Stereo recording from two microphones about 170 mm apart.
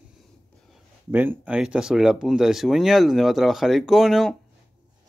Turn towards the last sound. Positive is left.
turn(degrees=0)  # may be behind; listen again after turning